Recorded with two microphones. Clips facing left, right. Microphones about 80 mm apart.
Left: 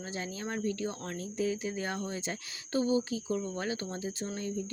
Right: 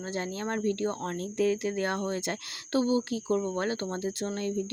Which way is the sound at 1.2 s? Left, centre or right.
Right.